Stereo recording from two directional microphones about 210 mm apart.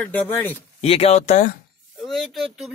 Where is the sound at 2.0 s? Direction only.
Centre (ahead or behind).